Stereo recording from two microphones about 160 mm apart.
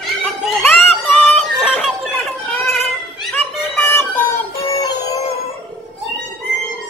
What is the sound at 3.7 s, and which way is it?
Synthetic singing, 10° left (ahead or behind).